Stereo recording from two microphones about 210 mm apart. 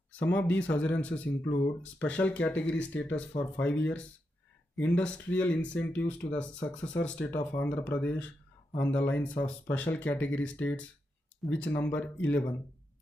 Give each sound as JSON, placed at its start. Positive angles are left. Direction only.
{"t": 0.1, "sound": "speech", "side_deg": 10}